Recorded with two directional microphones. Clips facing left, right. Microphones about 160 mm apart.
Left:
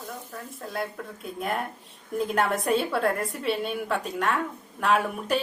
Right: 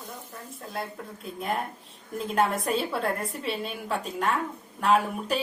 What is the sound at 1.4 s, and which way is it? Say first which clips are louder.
A woman's voice: left 1 dB; centre (ahead or behind).